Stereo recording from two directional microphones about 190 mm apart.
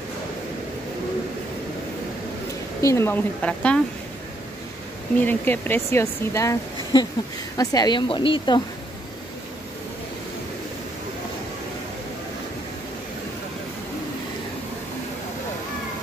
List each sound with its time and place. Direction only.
2.8 s a woman's voice: 15° left (ahead or behind)
5.2 s a woman's voice: 10° left (ahead or behind); by 8.6 s 25° left (ahead or behind)